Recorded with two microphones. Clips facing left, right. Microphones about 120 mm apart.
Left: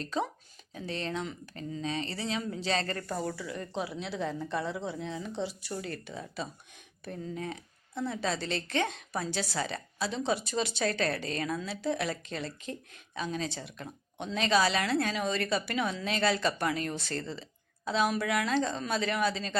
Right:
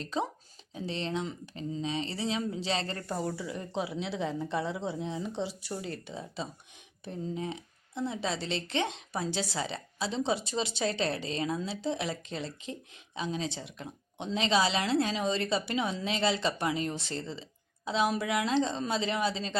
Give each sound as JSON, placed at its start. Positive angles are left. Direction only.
{"t": 0.0, "sound": "speech", "side_deg": -25}